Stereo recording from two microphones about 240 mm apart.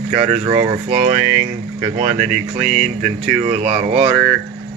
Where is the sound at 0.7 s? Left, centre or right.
Right.